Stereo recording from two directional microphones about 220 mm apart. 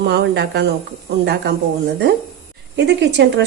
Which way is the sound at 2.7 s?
50° right (ahead or behind).